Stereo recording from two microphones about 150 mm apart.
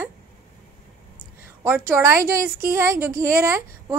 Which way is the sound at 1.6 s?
15° right (ahead or behind).